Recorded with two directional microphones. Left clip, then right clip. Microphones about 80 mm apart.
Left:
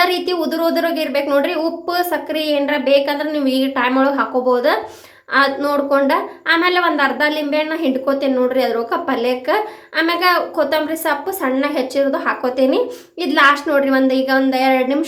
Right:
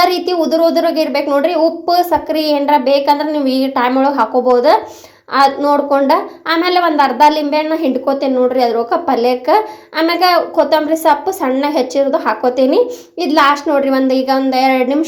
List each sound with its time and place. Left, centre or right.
0.0 s a woman's voice: right
6.1 s speech: right
8.0 s speech: right
11.1 s speech: right